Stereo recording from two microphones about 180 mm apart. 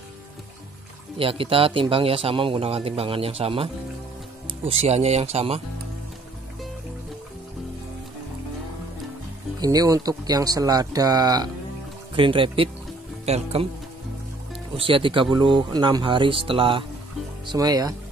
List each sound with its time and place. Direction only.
1.1 s speech: 30° right (ahead or behind)
9.6 s speech: 20° right (ahead or behind)
14.8 s speech: 30° right (ahead or behind)